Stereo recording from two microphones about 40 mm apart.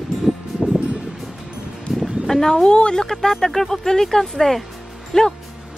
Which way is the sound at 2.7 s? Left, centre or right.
Left.